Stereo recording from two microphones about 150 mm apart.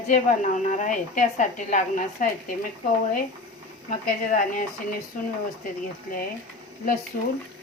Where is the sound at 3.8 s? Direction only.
60° left (ahead or behind).